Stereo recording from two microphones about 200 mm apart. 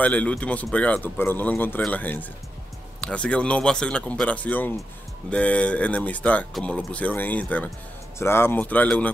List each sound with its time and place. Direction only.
0.0 s speech: 5° left (ahead or behind)